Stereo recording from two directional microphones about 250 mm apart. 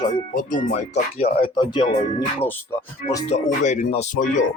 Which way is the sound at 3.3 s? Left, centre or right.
Left.